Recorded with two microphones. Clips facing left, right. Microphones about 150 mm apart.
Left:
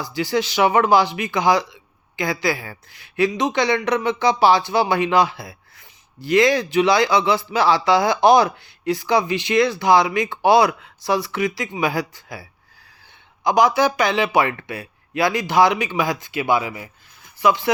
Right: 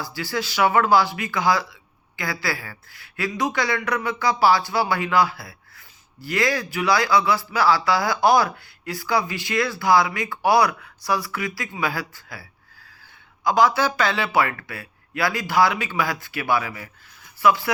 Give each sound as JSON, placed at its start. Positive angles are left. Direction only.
{"t": 0.0, "sound": "a woman's voice", "side_deg": 20}